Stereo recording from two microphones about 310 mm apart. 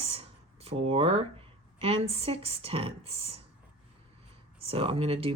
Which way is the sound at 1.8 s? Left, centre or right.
Centre.